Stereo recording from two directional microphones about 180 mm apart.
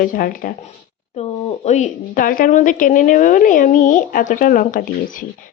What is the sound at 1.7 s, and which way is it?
A woman's voice, 45° left (ahead or behind).